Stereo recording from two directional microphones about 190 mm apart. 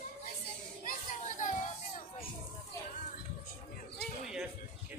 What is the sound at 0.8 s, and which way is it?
Children playing, 40° left (ahead or behind).